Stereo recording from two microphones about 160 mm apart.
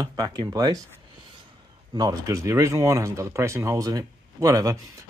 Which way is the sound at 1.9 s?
25° right (ahead or behind).